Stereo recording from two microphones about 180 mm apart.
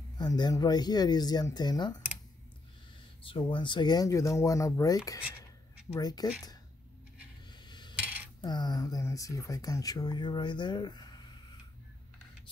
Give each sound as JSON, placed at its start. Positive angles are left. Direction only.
{"t": 0.2, "sound": "speech", "side_deg": 20}
{"t": 3.3, "sound": "speech", "side_deg": 30}
{"t": 7.6, "sound": "coin", "side_deg": 25}
{"t": 8.4, "sound": "speech", "side_deg": 25}